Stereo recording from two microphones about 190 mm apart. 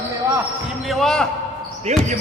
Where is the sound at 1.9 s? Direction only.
35° right (ahead or behind).